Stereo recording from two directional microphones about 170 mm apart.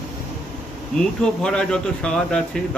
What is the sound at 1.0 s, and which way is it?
A man's voice, 5° left (ahead or behind).